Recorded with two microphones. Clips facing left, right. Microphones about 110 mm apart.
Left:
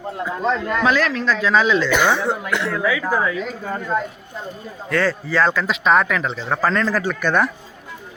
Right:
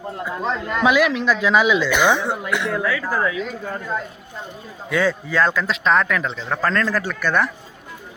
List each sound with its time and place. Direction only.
0.3 s speech: 10° right (ahead or behind)
2.8 s speech: 10° left (ahead or behind)
4.9 s speech: 5° right (ahead or behind)
7.2 s speech: 15° left (ahead or behind)